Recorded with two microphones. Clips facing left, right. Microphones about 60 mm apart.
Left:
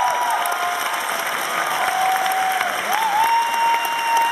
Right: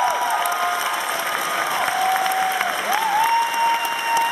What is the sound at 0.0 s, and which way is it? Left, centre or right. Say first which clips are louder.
Applause: left 1 dB; centre.